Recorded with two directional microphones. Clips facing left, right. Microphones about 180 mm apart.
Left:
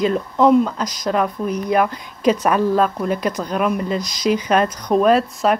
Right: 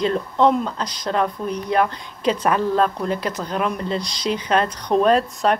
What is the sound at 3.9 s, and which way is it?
Speech, 30° right (ahead or behind).